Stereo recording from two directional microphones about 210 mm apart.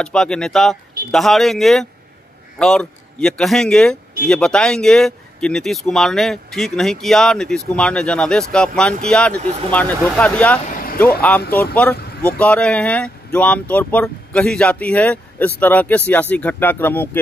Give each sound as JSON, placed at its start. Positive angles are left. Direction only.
{"t": 0.0, "sound": "speech", "side_deg": 5}
{"t": 10.7, "sound": "vehicle", "side_deg": 40}
{"t": 11.0, "sound": "speech", "side_deg": 5}